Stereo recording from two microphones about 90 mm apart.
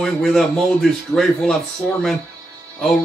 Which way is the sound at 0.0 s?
5° left (ahead or behind).